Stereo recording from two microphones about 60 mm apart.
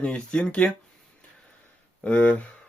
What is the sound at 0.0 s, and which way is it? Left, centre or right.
Speech, left.